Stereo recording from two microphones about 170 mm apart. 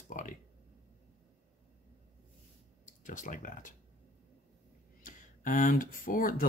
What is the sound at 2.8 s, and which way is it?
Speech, 50° left (ahead or behind).